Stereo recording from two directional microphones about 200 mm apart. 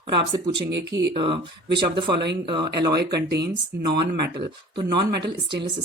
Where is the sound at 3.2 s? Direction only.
55° right (ahead or behind).